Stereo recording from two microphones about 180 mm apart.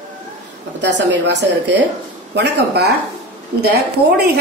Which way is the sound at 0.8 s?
75° right (ahead or behind).